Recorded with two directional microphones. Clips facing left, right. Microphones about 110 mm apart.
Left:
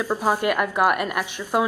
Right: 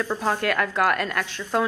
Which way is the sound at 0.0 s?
10° left (ahead or behind).